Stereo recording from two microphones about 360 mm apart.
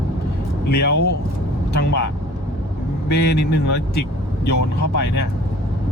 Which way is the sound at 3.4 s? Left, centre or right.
Left.